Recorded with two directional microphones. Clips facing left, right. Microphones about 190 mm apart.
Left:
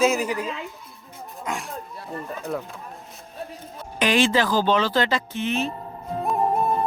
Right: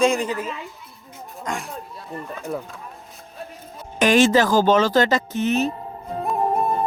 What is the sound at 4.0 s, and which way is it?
Speech, 45° right (ahead or behind).